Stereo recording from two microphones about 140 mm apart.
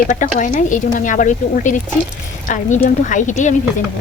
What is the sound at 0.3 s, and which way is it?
A woman's voice, 65° left (ahead or behind).